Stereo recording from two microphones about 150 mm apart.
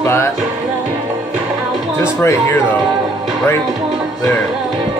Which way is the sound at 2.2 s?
15° left (ahead or behind).